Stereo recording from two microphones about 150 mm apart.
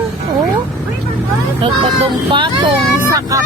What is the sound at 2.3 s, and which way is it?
Speech, 35° right (ahead or behind).